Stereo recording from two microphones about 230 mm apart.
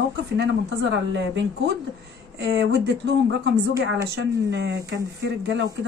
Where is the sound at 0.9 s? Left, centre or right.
Right.